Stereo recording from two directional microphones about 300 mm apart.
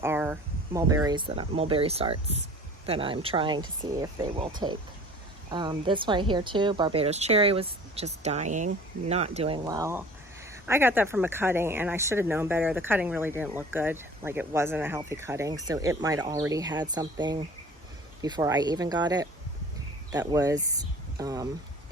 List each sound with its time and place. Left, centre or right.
0.0 s a woman's voice: centre